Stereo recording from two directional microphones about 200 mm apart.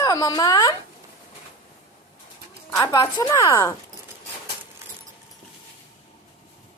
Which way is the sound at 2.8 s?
20° left (ahead or behind).